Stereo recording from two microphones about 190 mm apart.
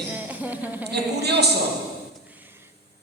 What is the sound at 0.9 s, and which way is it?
Speech, 60° right (ahead or behind).